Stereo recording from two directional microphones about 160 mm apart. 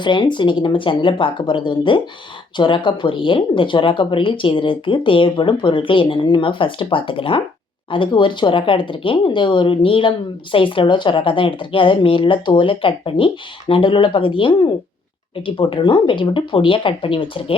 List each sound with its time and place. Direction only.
0.0 s speech: 30° left (ahead or behind)